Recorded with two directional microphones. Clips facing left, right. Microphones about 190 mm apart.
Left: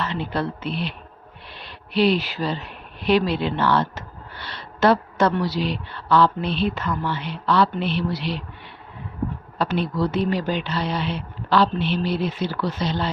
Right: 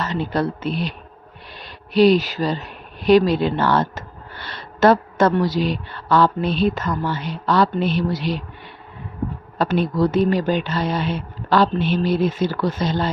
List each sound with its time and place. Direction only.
0.0 s speech: 40° right (ahead or behind)
9.6 s speech: 45° right (ahead or behind)